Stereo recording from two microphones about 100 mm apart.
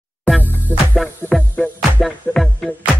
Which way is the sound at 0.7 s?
20° right (ahead or behind).